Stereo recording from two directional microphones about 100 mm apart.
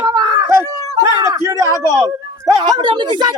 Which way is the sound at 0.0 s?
45° right (ahead or behind).